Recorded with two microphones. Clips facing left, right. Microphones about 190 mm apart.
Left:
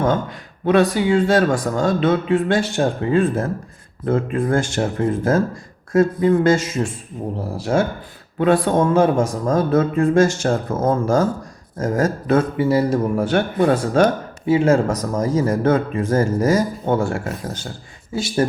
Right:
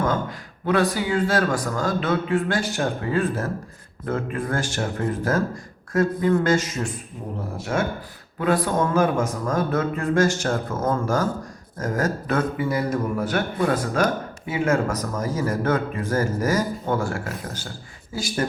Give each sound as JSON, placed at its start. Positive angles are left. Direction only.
{"t": 0.0, "sound": "a man's voice", "side_deg": 25}